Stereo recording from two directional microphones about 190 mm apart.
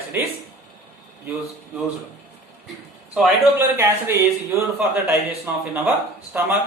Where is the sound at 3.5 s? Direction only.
15° right (ahead or behind).